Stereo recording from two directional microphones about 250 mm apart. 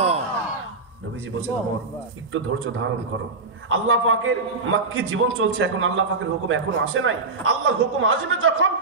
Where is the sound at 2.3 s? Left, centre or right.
Right.